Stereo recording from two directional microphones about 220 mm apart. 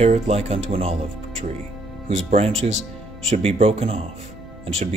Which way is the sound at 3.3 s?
25° right (ahead or behind).